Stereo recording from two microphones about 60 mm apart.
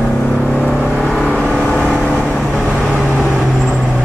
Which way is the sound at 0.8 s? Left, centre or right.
Centre.